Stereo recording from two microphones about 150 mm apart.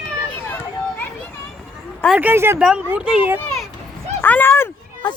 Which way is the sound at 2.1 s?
15° right (ahead or behind).